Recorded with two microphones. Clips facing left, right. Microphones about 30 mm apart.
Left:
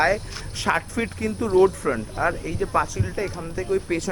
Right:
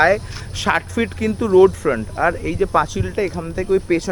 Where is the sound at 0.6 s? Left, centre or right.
Right.